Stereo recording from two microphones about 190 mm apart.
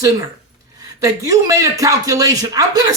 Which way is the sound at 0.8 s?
15° right (ahead or behind).